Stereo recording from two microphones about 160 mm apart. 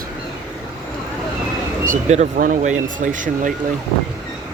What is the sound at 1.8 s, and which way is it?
Speech, 50° right (ahead or behind).